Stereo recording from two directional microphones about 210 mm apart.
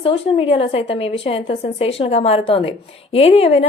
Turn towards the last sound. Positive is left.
turn(degrees=30)  # may be behind; listen again after turning